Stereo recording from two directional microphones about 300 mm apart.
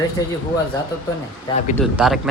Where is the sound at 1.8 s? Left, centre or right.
Centre.